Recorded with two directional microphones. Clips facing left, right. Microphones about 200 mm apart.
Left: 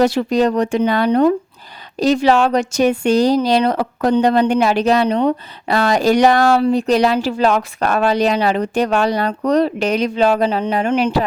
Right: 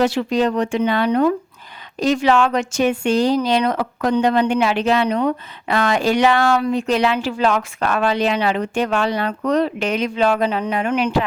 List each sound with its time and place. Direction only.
0.0 s speech: 40° left (ahead or behind)